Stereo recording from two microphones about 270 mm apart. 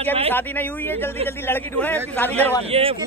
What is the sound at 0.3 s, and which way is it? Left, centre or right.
A man's voice, centre.